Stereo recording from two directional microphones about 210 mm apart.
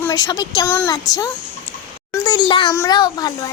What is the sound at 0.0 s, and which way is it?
A child's voice, 20° left (ahead or behind).